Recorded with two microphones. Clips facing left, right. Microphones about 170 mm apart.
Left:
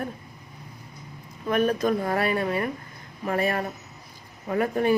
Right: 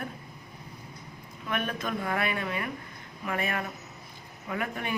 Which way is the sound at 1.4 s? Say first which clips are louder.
Left 10 dB; 40° left (ahead or behind).